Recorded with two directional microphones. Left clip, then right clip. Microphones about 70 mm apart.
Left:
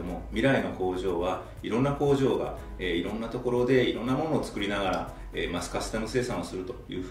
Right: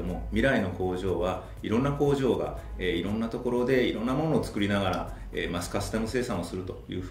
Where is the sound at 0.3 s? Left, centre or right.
Left.